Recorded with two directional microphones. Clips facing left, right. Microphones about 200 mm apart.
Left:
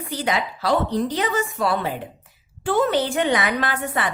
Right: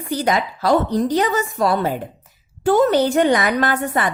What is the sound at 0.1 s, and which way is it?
A woman's voice, 45° right (ahead or behind).